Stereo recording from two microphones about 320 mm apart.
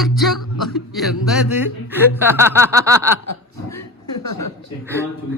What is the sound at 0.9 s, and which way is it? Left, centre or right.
Speech, centre.